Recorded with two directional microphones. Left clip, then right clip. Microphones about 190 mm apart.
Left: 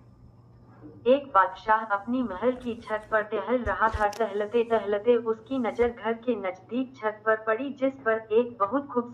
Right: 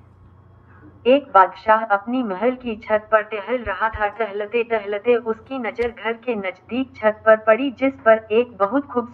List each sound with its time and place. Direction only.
1.1 s a woman's voice: 20° right (ahead or behind)